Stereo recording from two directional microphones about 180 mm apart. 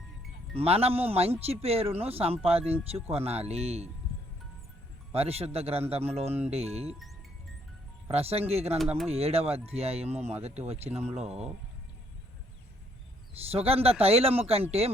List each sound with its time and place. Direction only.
0.5 s speech: 35° right (ahead or behind)
5.1 s speech: 35° right (ahead or behind)
8.0 s speech: 35° right (ahead or behind)
11.1 s speech: 5° right (ahead or behind)
13.5 s speech: 35° right (ahead or behind)